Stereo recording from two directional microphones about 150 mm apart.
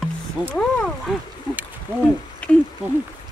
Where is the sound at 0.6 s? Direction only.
5° left (ahead or behind).